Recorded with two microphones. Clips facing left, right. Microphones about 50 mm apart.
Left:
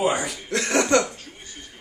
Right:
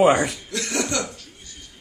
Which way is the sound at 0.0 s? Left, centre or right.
Right.